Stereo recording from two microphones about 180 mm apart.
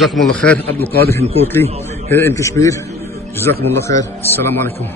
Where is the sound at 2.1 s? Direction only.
15° left (ahead or behind).